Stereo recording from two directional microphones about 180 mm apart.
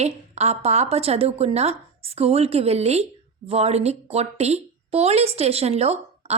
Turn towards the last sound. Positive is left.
turn(degrees=-35)  # may be behind; listen again after turning